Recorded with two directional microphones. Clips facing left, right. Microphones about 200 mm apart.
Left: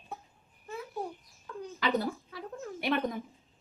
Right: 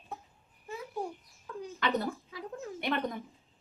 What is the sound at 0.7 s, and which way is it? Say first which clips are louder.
Babbling: even; 10° right (ahead or behind).